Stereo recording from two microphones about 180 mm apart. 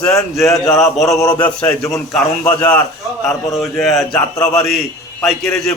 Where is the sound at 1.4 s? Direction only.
10° left (ahead or behind).